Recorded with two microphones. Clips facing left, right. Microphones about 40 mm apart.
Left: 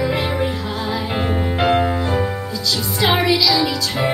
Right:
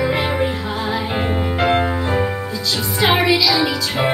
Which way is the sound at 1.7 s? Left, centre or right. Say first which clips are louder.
Left 1 dB; right.